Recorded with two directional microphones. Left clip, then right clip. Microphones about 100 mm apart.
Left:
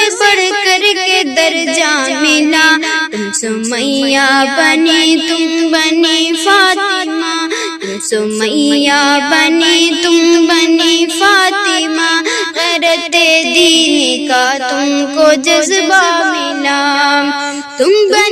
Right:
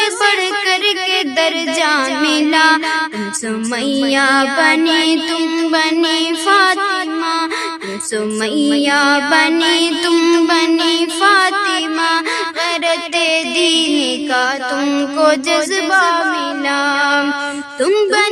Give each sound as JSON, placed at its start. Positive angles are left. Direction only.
{"t": 0.0, "sound": "music", "side_deg": 30}
{"t": 4.0, "sound": "music", "side_deg": 35}
{"t": 8.5, "sound": "music", "side_deg": 35}
{"t": 10.2, "sound": "music", "side_deg": 20}
{"t": 12.8, "sound": "music", "side_deg": 40}